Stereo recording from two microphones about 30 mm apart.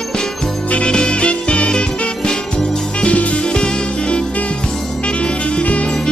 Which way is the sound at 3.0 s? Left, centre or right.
Left.